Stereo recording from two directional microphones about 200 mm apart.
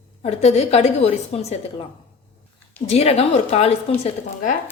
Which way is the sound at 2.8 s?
30° left (ahead or behind).